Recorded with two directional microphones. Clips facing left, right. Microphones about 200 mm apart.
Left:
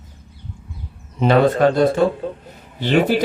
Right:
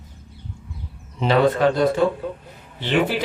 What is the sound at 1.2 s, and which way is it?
A man's voice, 45° left (ahead or behind).